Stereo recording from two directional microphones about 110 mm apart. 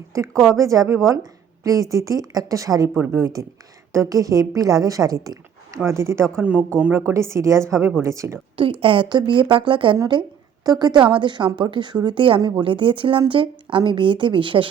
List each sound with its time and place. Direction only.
0.1 s a woman's voice: 25° right (ahead or behind)
6.4 s speech: 15° right (ahead or behind)
7.1 s a woman's voice: 25° right (ahead or behind)
8.8 s a woman's voice: 50° right (ahead or behind)